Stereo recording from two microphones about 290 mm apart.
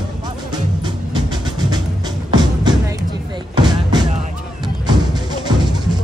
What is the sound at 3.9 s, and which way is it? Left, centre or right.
Music, centre.